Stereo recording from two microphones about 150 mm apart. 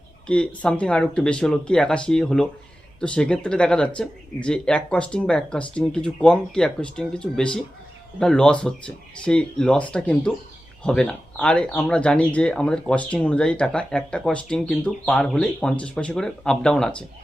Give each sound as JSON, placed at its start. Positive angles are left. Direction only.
{"t": 0.3, "sound": "speech", "side_deg": 5}